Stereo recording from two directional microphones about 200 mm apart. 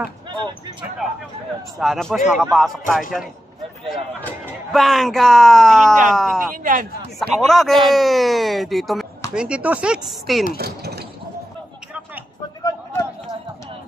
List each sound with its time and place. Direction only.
1.8 s speech: centre (ahead or behind)
4.7 s speech: centre (ahead or behind)
6.5 s speech: 45° right (ahead or behind)
7.2 s speech: centre (ahead or behind)
10.6 s a sound: 55° right (ahead or behind)